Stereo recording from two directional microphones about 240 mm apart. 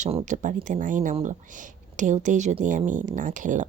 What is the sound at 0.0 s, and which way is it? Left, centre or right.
Speech, right.